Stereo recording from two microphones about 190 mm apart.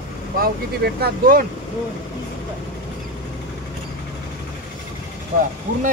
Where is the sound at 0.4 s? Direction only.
55° right (ahead or behind).